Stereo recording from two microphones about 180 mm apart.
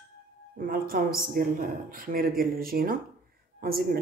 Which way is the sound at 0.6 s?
55° right (ahead or behind).